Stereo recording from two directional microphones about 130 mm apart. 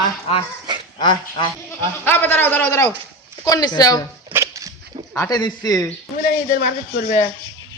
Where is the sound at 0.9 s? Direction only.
40° left (ahead or behind).